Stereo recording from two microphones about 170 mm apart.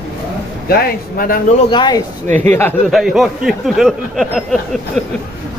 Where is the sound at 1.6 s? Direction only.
25° left (ahead or behind).